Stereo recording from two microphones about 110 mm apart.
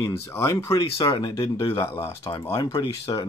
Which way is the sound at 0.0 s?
25° left (ahead or behind).